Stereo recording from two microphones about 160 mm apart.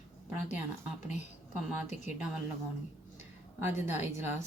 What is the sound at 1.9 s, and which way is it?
Speech, 50° left (ahead or behind).